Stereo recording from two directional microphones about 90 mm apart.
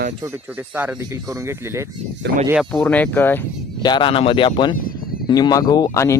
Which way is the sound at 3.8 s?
55° left (ahead or behind).